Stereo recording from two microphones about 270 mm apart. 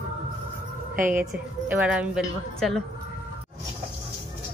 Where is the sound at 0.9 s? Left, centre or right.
Right.